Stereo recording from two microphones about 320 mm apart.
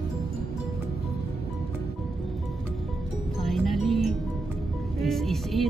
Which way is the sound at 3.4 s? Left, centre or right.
Centre.